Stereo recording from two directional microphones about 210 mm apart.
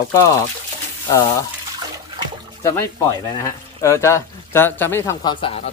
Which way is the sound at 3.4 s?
15° left (ahead or behind).